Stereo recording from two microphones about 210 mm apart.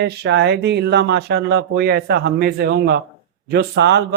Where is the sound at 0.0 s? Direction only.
55° right (ahead or behind).